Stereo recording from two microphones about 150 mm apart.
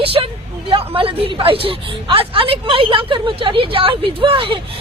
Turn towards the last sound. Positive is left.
turn(degrees=-35)  # may be behind; listen again after turning